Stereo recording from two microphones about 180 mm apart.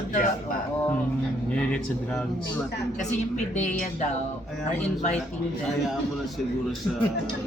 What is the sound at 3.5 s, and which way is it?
Speech, 40° left (ahead or behind).